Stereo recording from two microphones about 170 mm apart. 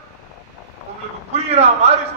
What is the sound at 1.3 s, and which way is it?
Speech, 40° right (ahead or behind).